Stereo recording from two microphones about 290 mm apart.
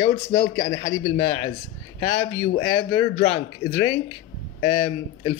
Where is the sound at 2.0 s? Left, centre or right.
Centre.